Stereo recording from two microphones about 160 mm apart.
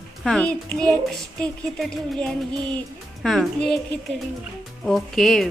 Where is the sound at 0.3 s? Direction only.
5° left (ahead or behind).